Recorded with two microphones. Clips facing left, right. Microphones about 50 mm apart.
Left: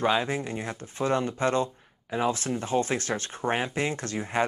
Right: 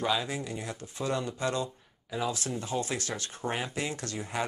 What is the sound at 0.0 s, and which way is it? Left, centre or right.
Speech, left.